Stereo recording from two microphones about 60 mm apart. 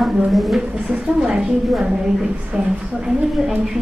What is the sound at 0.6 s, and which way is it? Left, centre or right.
A woman's voice, centre.